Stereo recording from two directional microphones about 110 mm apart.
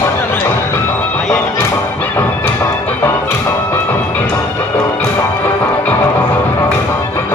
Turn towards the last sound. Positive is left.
turn(degrees=20)  # may be behind; listen again after turning